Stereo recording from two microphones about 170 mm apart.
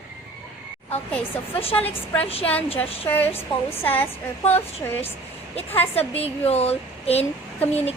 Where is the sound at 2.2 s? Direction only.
35° left (ahead or behind).